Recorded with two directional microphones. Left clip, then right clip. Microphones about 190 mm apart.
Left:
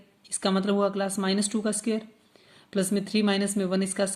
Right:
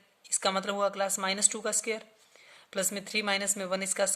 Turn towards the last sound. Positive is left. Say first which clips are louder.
# left 3 dB
turn(degrees=-20)  # may be behind; listen again after turning